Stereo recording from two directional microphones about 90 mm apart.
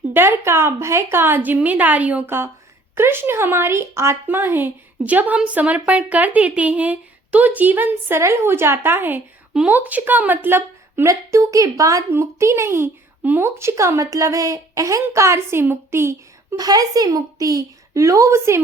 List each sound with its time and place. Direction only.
0.1 s speech: 25° right (ahead or behind)
2.9 s a woman's voice: 25° right (ahead or behind)
11.1 s speech: 35° right (ahead or behind)
16.6 s speech: 45° right (ahead or behind)